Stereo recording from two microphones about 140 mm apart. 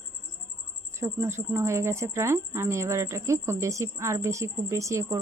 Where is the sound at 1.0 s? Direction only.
15° right (ahead or behind).